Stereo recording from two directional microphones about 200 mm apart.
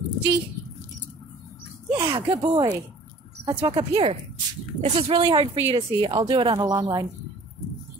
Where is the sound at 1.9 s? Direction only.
25° right (ahead or behind).